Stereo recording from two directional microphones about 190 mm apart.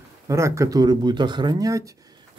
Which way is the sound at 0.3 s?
15° right (ahead or behind).